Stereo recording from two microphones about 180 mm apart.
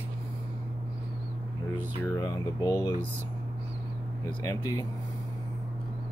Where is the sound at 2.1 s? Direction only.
20° left (ahead or behind).